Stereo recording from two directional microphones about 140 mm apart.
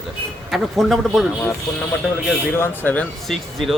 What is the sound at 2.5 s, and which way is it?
Speech, 15° left (ahead or behind).